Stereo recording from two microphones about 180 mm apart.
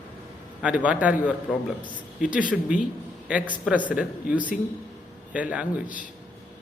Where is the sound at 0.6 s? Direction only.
5° right (ahead or behind).